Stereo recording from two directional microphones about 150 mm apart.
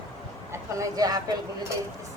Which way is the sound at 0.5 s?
20° right (ahead or behind).